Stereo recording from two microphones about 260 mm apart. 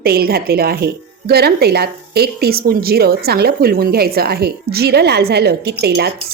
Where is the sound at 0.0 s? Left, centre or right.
Right.